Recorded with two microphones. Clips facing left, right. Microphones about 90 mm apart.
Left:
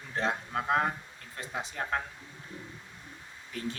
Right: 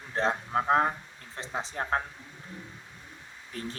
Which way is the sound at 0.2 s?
30° right (ahead or behind).